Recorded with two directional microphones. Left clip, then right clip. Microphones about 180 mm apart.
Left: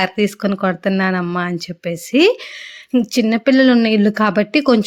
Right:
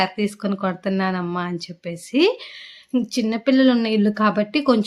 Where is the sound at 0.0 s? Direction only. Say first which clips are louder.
Left 5 dB; 40° left (ahead or behind).